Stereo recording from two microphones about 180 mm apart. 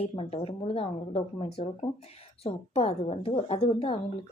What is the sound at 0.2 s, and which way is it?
A woman's voice, 30° left (ahead or behind).